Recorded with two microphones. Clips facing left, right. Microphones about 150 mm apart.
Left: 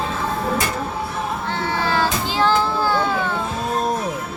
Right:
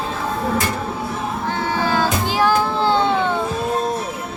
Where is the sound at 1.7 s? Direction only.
15° right (ahead or behind).